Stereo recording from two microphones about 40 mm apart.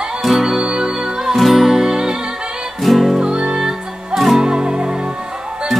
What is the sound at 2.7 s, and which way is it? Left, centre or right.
Music, centre.